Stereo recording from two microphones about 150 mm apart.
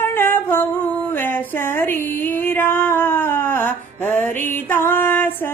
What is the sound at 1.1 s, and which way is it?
Music, 15° left (ahead or behind).